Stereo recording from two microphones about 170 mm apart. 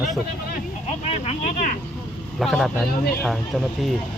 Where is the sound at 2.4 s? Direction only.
Centre (ahead or behind).